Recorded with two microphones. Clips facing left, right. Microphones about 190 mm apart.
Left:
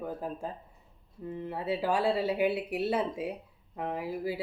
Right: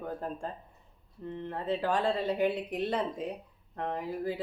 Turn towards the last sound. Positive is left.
turn(degrees=10)  # may be behind; listen again after turning